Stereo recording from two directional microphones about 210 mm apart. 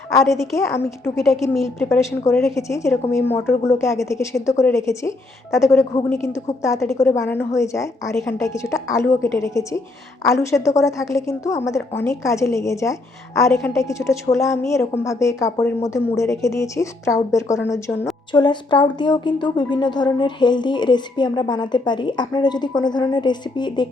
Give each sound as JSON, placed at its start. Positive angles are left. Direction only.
{"t": 0.1, "sound": "a woman's voice", "side_deg": 15}
{"t": 1.2, "sound": "a woman's voice", "side_deg": 0}
{"t": 2.4, "sound": "a woman's voice", "side_deg": 15}